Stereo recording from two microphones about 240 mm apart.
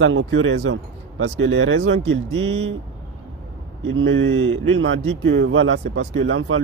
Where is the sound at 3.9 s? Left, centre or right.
Right.